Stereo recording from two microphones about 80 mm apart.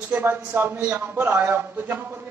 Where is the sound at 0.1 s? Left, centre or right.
Right.